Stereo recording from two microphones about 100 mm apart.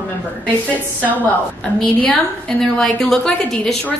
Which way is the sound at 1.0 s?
15° left (ahead or behind).